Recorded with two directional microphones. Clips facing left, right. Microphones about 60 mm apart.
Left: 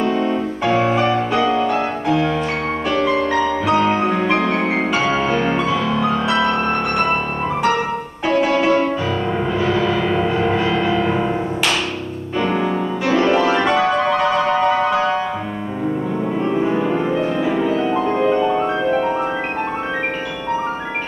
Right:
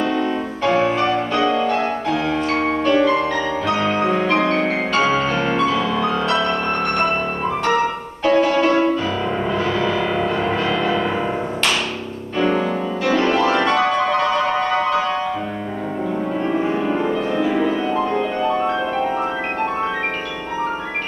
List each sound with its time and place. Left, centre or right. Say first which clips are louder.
0.1 s music: left 2 dB; centre
3.6 s music: left 1 dB; centre
10.2 s music: left 2 dB; centre
12.4 s music: even; centre